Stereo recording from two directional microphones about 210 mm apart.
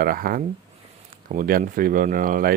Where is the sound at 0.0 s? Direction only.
45° right (ahead or behind).